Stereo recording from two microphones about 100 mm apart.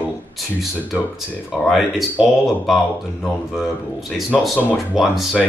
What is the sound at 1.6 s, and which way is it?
Speech, centre (ahead or behind).